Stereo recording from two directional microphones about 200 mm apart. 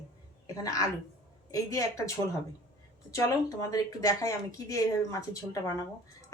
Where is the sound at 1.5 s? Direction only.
15° left (ahead or behind).